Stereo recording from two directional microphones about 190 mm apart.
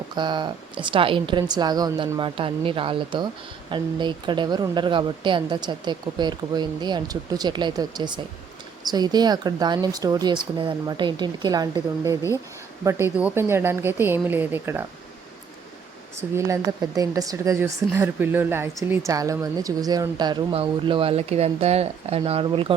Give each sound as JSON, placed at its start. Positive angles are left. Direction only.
{"t": 0.2, "sound": "a woman's voice", "side_deg": -25}
{"t": 16.3, "sound": "a woman's voice", "side_deg": -15}